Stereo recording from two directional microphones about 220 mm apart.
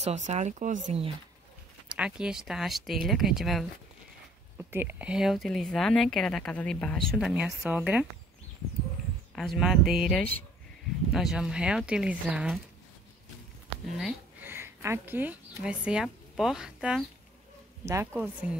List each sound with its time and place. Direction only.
0.0 s speech: 30° right (ahead or behind)
1.9 s speech: 5° right (ahead or behind)
9.3 s speech: centre (ahead or behind)
13.9 s speech: 5° right (ahead or behind)